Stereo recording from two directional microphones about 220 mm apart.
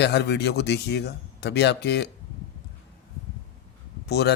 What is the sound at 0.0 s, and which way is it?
Speech, 50° left (ahead or behind).